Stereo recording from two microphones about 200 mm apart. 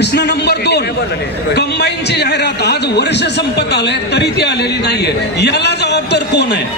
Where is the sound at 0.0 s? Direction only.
55° left (ahead or behind).